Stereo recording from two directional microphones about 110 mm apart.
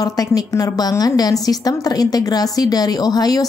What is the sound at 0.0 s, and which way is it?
A woman's voice, 35° left (ahead or behind).